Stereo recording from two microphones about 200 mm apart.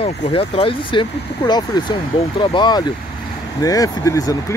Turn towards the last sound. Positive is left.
turn(degrees=15)  # may be behind; listen again after turning